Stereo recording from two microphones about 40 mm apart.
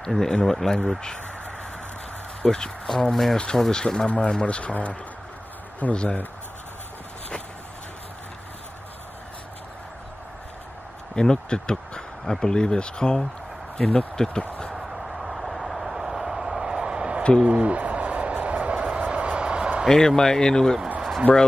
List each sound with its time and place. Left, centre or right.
0.0 s speech: centre
2.4 s speech: centre
3.1 s speech: centre
3.3 s speech: left
5.8 s speech: left
11.1 s speech: left
14.9 s vehicle: centre; by 17.2 s right
17.5 s a sound: right
19.9 s speech: centre